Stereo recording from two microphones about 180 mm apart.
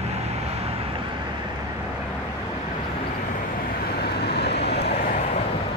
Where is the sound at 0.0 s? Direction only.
35° right (ahead or behind).